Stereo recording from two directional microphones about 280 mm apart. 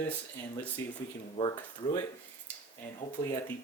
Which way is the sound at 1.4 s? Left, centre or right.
Centre.